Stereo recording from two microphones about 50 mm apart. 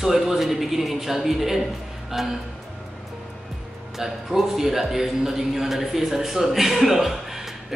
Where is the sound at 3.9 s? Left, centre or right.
Centre.